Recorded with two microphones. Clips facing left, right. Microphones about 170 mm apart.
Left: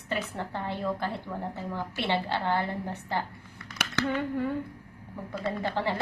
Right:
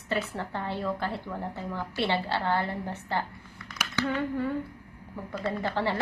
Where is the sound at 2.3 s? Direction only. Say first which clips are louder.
Even; 15° left (ahead or behind).